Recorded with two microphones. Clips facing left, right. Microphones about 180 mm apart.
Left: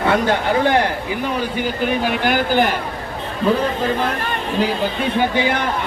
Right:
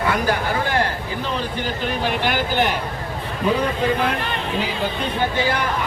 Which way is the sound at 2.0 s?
Centre (ahead or behind).